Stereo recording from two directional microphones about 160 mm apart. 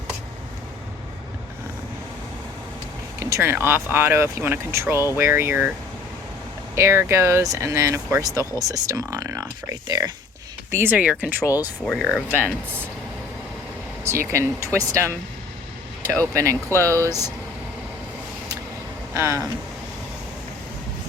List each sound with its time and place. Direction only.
3.2 s speech: 15° right (ahead or behind)
6.7 s speech: 15° right (ahead or behind); by 12.1 s centre (ahead or behind)
14.0 s speech: 15° right (ahead or behind)
16.2 s speech: 20° right (ahead or behind)
16.6 s speech: 15° left (ahead or behind)
16.9 s speech: 20° right (ahead or behind)
19.1 s speech: 15° right (ahead or behind)